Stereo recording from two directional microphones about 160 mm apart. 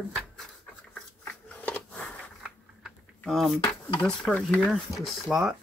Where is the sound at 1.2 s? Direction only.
10° left (ahead or behind).